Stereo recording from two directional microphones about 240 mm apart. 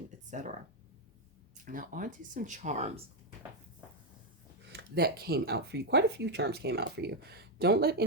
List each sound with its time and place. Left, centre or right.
0.3 s speech: right
1.5 s speech: right
4.7 s speech: right